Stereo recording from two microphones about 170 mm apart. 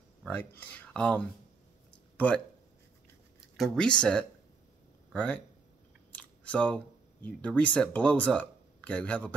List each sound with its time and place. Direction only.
0.2 s speech: 10° left (ahead or behind)
3.5 s speech: centre (ahead or behind)